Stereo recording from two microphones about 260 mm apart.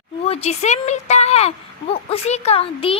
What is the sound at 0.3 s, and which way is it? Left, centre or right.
Speech, left.